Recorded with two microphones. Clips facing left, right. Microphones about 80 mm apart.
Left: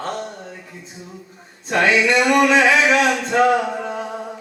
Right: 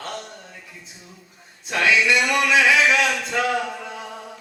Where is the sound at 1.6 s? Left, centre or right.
Left.